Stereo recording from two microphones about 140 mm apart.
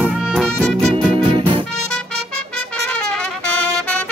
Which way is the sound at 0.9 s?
40° right (ahead or behind).